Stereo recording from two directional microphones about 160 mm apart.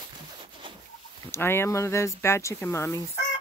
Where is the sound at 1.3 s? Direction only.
15° left (ahead or behind).